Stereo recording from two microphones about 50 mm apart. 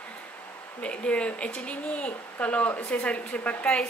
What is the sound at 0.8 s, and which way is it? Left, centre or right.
Speech, left.